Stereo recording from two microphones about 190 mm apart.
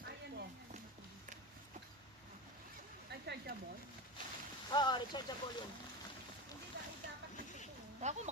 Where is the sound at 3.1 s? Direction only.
60° right (ahead or behind).